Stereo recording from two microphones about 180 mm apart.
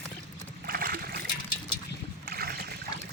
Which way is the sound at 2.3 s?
60° right (ahead or behind).